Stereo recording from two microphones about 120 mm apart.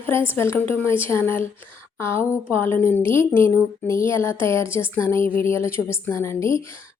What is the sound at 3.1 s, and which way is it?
Speech, 45° right (ahead or behind).